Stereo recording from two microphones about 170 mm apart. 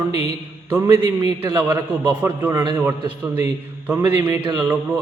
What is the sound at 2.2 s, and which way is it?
Speech, 10° right (ahead or behind).